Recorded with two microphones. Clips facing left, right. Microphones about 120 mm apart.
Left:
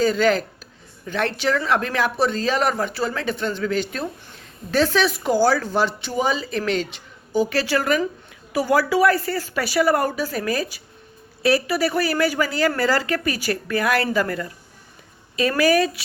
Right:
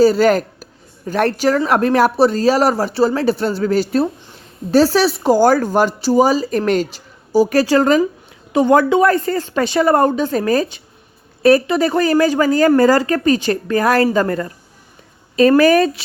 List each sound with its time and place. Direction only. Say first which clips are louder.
0.0 s a woman's voice: right 7 dB; 40° right (ahead or behind)
5.4 s a woman's voice: right 5 dB; 45° right (ahead or behind)
8.5 s a woman's voice: right 7 dB; 25° right (ahead or behind)
9.2 s a woman's voice: right 6 dB; 40° right (ahead or behind)
9.6 s a woman's voice: right 6 dB; 30° right (ahead or behind)
10.3 s a woman's voice: right 8 dB; 40° right (ahead or behind)
11.6 s a woman's voice: right 5 dB; 25° right (ahead or behind)
11.9 s a woman's voice: right 8 dB; 40° right (ahead or behind)